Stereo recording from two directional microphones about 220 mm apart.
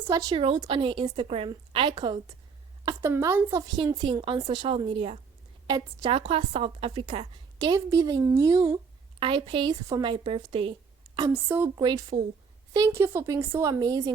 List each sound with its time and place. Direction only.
0.0 s a woman's voice: 15° right (ahead or behind)
11.2 s a woman's voice: 10° right (ahead or behind)